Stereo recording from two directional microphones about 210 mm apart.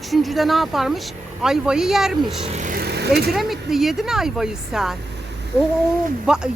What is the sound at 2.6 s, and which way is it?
Speech, 40° right (ahead or behind).